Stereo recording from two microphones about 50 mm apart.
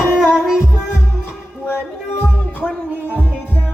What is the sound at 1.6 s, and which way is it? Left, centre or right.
Music, left.